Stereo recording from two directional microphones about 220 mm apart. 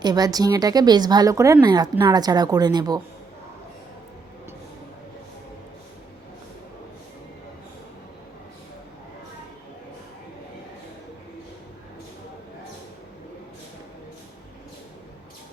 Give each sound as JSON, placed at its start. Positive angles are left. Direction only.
{"t": 0.0, "sound": "speech", "side_deg": -20}